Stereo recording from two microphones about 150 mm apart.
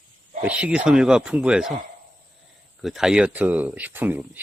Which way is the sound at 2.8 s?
5° right (ahead or behind).